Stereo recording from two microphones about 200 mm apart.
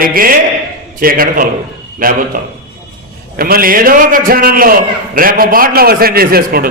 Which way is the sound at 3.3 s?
45° right (ahead or behind).